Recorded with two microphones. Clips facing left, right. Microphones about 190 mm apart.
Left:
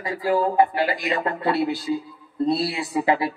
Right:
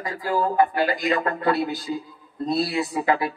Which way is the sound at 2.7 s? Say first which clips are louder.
Left 1 dB; 25° left (ahead or behind).